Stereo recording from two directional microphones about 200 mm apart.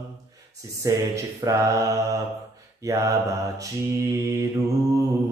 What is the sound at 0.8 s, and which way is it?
Mantra, 15° right (ahead or behind).